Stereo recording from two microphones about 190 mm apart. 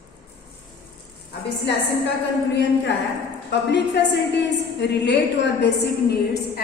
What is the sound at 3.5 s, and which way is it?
A woman's voice, 65° left (ahead or behind).